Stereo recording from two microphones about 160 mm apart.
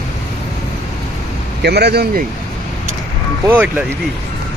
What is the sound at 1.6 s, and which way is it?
Speech, 90° right.